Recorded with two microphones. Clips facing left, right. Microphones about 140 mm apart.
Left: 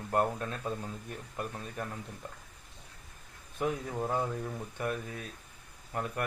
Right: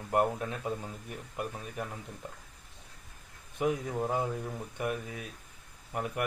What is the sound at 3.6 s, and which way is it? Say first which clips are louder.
Speech: right 2 dB; 10° right (ahead or behind).